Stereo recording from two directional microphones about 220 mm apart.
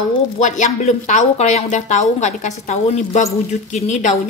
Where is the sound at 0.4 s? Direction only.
35° left (ahead or behind).